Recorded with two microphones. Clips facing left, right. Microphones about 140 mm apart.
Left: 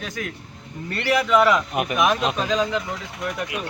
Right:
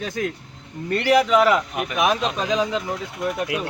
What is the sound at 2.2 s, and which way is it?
Speech, 10° left (ahead or behind).